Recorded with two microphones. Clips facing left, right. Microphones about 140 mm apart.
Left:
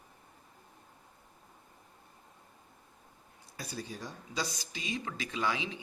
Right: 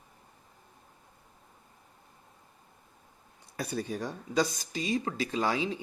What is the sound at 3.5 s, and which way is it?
Speech, 60° right (ahead or behind).